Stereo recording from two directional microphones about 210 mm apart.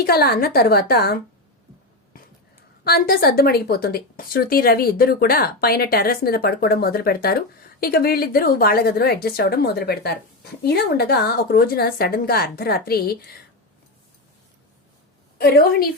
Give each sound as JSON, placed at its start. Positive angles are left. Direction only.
{"t": 0.0, "sound": "a woman's voice", "side_deg": 50}
{"t": 2.8, "sound": "a woman's voice", "side_deg": 45}
{"t": 15.4, "sound": "a woman's voice", "side_deg": 45}